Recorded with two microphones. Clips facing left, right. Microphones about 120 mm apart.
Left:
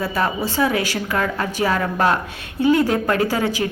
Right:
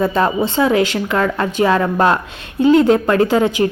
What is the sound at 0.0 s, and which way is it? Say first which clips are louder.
A woman's voice: right 6 dB; 25° right (ahead or behind).